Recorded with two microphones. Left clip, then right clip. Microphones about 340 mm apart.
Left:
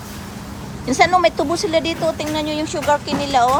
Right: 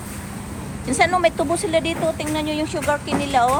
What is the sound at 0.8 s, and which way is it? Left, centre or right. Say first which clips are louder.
Speech: left 3 dB; centre.